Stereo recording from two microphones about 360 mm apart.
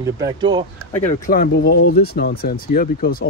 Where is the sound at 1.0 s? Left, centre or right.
Left.